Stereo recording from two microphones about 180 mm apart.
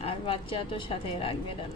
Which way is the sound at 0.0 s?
30° left (ahead or behind).